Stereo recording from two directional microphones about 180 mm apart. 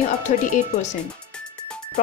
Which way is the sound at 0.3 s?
40° left (ahead or behind).